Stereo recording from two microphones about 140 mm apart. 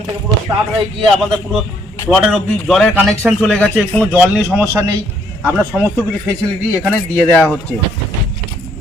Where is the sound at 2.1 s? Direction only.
5° right (ahead or behind).